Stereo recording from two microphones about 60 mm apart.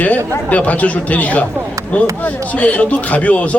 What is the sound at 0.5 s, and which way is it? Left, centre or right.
Speech, left.